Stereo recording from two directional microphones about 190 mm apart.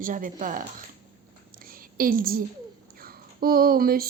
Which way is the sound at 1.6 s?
50° right (ahead or behind).